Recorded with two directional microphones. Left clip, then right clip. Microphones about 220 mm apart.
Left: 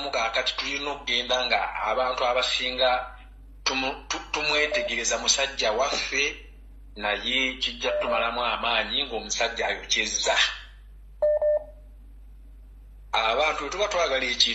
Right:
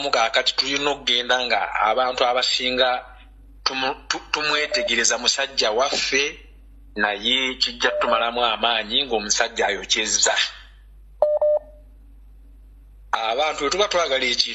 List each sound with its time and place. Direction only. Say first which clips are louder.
0.0 s speech: right 6 dB; 35° right (ahead or behind)
13.1 s speech: right 1 dB; 35° right (ahead or behind)